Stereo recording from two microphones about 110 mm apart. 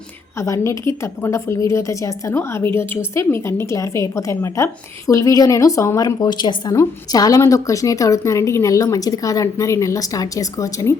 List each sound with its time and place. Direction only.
0.3 s a woman's voice: 25° left (ahead or behind)
6.1 s a woman's voice: 40° left (ahead or behind)